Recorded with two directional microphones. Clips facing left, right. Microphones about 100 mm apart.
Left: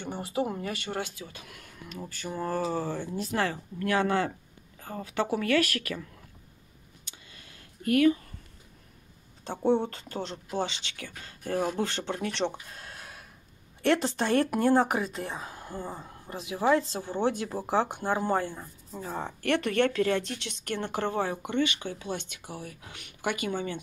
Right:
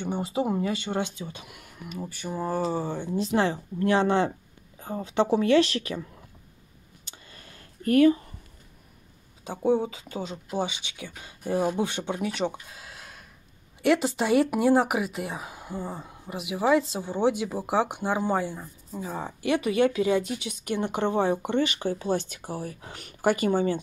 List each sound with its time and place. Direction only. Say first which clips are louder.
0.0 s speech: right 3 dB; 20° right (ahead or behind)
7.1 s a sound: right 4 dB; 40° right (ahead or behind)
9.4 s speech: right 1 dB; 5° right (ahead or behind); by 23.8 s 35° right (ahead or behind)